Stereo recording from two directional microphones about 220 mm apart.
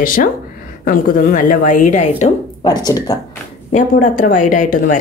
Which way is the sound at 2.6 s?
20° left (ahead or behind).